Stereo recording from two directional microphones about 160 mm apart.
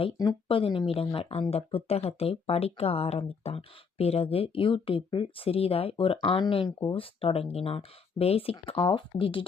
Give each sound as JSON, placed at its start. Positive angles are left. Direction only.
{"t": 0.2, "sound": "speech", "side_deg": 30}